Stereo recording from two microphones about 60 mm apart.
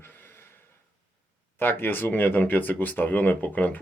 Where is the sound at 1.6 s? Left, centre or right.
Left.